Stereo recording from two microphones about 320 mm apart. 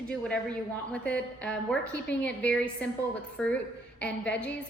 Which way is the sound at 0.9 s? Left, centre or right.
Centre.